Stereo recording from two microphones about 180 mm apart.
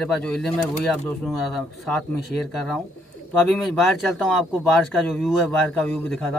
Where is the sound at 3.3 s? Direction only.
Centre (ahead or behind).